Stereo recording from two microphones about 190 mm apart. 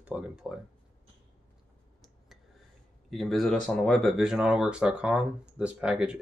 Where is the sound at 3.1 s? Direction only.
Centre (ahead or behind).